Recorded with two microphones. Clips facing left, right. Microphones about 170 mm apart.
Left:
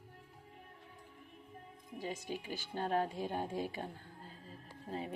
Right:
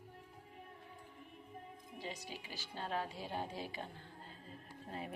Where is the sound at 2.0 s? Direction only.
50° left (ahead or behind).